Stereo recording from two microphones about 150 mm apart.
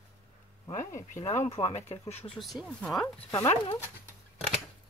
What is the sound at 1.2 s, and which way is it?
Speech, 45° left (ahead or behind).